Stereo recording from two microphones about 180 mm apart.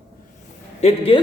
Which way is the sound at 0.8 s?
35° left (ahead or behind).